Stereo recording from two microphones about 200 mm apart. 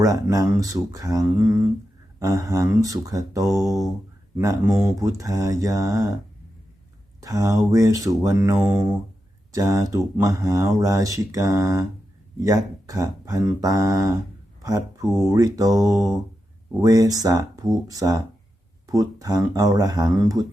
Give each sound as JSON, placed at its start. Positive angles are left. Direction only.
{"t": 0.0, "sound": "speech", "side_deg": -15}
{"t": 7.2, "sound": "speech", "side_deg": -15}